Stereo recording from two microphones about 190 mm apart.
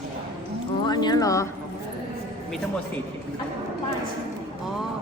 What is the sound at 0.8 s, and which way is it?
Speech, 20° left (ahead or behind).